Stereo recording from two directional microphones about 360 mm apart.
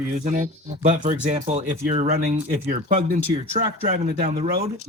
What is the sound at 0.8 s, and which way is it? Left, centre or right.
Speech, right.